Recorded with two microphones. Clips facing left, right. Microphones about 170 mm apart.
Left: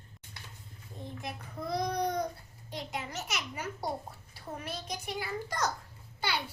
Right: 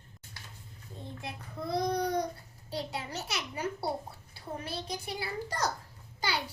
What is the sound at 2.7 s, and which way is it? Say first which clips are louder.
Speech: right 2 dB; 35° right (ahead or behind).